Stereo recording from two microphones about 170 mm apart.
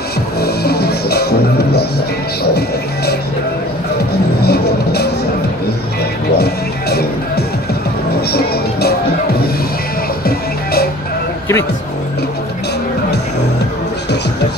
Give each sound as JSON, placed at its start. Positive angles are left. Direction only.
{"t": 0.4, "sound": "music", "side_deg": 70}
{"t": 4.4, "sound": "music", "side_deg": 70}
{"t": 6.3, "sound": "music", "side_deg": 70}
{"t": 10.2, "sound": "music", "side_deg": 65}